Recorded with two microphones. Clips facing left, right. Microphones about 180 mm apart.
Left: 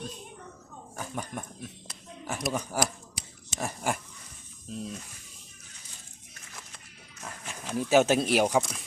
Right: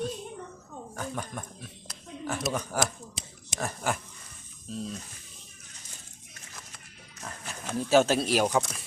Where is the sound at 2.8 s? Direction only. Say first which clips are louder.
Even; 20° right (ahead or behind).